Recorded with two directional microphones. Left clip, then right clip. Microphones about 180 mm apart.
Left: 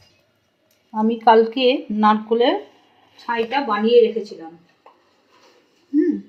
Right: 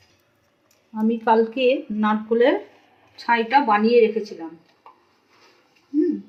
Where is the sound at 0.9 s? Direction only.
25° left (ahead or behind).